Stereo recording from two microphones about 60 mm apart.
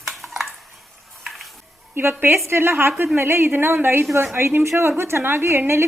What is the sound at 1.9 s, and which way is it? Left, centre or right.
A woman's voice, right.